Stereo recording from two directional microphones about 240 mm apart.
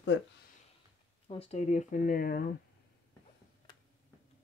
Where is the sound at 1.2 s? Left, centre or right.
Left.